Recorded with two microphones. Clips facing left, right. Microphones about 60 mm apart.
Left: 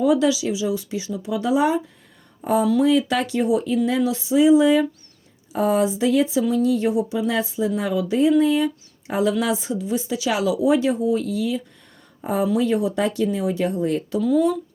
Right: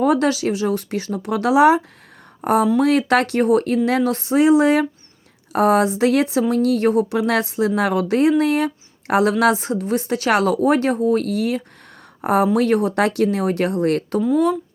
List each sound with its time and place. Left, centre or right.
0.0 s speech: right
2.4 s speech: right